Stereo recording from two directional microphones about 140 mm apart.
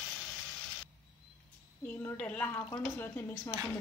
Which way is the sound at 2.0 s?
10° left (ahead or behind).